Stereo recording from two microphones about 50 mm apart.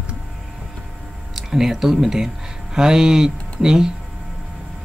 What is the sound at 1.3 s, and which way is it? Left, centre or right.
Speech, centre.